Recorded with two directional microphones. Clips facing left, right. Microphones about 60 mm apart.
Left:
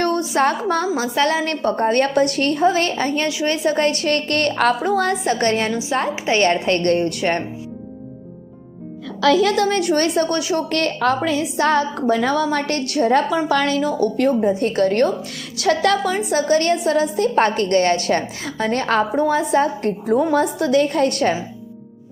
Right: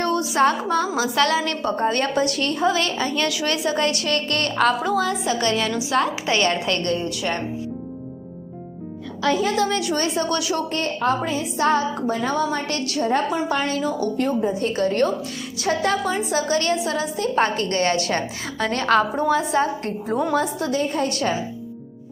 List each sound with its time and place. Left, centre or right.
0.0 s a woman's voice: left
1.1 s a woman's voice: left
1.4 s a woman's voice: left
5.7 s a woman's voice: left
6.9 s a woman's voice: left
9.2 s a woman's voice: left
9.6 s a woman's voice: left
10.2 s a woman's voice: left
10.7 s a woman's voice: left
11.5 s a woman's voice: left
13.7 s a woman's voice: left
15.5 s a woman's voice: left
16.3 s a woman's voice: left
20.3 s a woman's voice: left